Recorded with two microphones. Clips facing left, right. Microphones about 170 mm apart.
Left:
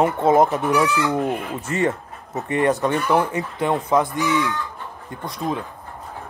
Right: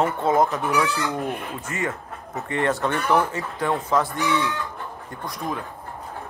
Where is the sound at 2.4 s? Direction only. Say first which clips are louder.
Left 4 dB; 15° left (ahead or behind).